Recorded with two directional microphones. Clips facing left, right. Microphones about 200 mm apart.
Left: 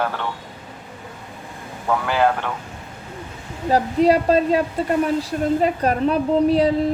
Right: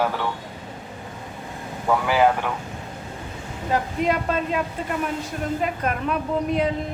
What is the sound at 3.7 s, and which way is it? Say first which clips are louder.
A woman's voice: left 7 dB; 35° left (ahead or behind).